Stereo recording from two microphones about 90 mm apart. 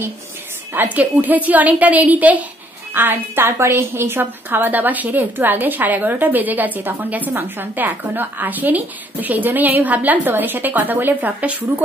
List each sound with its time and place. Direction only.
0.7 s a woman's voice: 15° right (ahead or behind)